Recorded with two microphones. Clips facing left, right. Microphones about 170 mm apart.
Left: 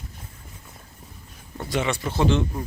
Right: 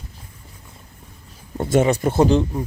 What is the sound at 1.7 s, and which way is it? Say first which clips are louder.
Speech: right 9 dB; 45° right (ahead or behind).